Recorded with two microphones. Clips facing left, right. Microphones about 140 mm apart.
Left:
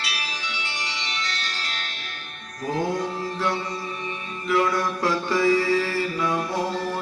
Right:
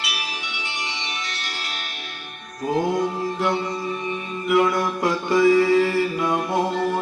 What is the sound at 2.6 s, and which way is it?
Mantra, 15° right (ahead or behind).